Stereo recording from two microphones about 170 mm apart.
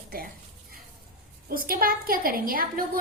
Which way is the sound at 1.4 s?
60° right (ahead or behind).